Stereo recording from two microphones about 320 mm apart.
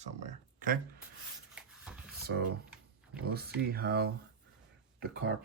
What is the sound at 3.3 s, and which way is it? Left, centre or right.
Speech, right.